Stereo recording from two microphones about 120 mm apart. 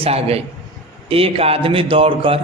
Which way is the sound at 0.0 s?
55° right (ahead or behind).